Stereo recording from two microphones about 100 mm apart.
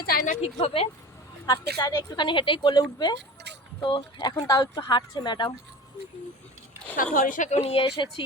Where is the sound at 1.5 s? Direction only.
40° left (ahead or behind); by 4.3 s 55° left (ahead or behind).